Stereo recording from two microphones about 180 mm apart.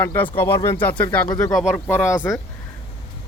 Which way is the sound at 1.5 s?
5° right (ahead or behind).